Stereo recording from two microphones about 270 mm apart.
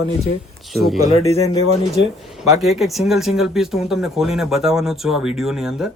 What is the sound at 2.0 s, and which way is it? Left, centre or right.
Speech, left.